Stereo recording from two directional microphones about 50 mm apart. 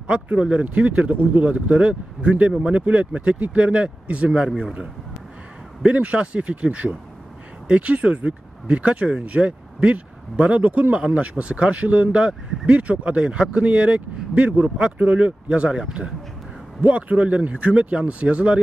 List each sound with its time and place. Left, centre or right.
0.0 s speech: right
5.9 s speech: right
16.8 s speech: right